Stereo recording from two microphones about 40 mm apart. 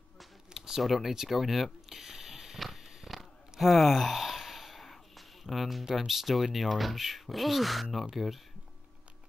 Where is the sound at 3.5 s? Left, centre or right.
Centre.